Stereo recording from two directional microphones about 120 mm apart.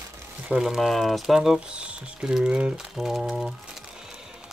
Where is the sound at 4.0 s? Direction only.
5° right (ahead or behind).